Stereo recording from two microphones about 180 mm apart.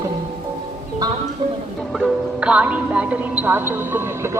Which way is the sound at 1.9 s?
5° right (ahead or behind).